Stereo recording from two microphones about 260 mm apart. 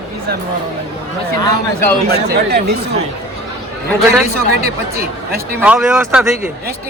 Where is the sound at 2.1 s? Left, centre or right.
Right.